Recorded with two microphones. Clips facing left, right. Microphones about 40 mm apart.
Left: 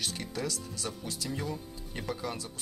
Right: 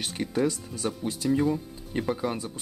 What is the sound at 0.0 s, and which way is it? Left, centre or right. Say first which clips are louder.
Speech: right 8 dB; right.